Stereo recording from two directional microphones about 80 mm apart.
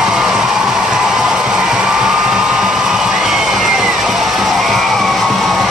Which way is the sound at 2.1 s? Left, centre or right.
Centre.